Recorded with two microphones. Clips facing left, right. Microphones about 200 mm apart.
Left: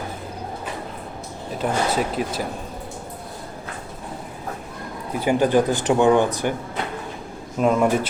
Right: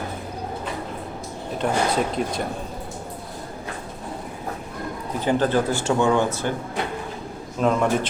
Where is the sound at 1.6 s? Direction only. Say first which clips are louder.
Even; 5° left (ahead or behind).